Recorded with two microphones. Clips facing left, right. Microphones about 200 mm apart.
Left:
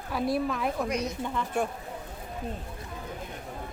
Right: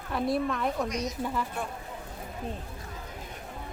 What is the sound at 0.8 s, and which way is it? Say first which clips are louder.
Speech: left 2 dB; 55° left (ahead or behind).